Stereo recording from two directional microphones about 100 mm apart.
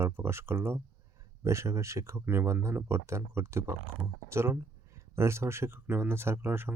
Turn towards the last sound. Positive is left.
turn(degrees=-25)  # may be behind; listen again after turning